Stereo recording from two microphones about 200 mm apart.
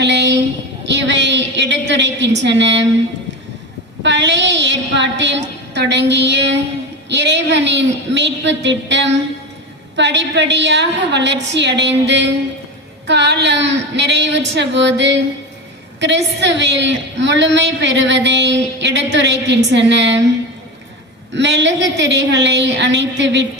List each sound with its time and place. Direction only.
0.0 s a sound: 60° right (ahead or behind)
0.9 s a woman's voice: 60° right (ahead or behind)
4.0 s a woman's voice: 60° right (ahead or behind)
21.3 s a woman's voice: 60° right (ahead or behind)